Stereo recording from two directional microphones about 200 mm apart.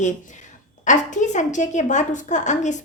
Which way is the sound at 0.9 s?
35° left (ahead or behind).